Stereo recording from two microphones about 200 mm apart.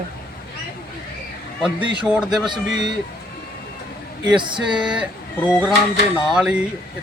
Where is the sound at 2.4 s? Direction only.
20° right (ahead or behind).